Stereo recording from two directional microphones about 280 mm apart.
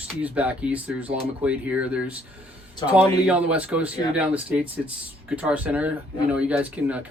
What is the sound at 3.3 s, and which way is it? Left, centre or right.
Speech, centre.